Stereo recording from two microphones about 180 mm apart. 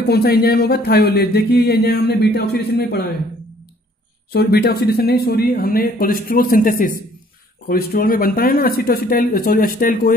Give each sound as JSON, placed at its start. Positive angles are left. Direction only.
{"t": 0.1, "sound": "speech", "side_deg": 60}
{"t": 4.3, "sound": "speech", "side_deg": 60}